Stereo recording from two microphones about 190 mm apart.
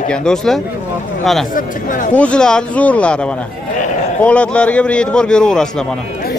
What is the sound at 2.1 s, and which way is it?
Speech, 5° left (ahead or behind).